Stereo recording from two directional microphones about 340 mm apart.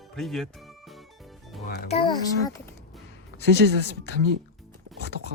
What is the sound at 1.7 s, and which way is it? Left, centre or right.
Speech, centre.